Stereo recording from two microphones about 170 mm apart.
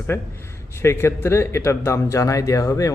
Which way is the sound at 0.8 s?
15° left (ahead or behind).